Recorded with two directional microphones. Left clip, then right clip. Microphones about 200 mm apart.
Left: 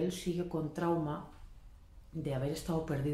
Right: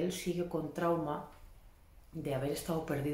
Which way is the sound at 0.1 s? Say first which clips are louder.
Right 1 dB; centre (ahead or behind).